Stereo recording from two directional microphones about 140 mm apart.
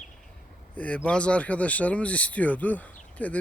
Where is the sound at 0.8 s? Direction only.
10° left (ahead or behind).